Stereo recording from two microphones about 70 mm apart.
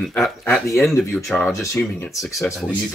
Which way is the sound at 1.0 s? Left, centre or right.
Left.